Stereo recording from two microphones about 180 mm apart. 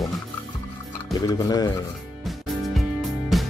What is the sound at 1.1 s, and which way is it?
Speech, 20° left (ahead or behind).